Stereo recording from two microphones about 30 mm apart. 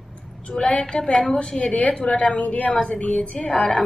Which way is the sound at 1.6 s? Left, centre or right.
Left.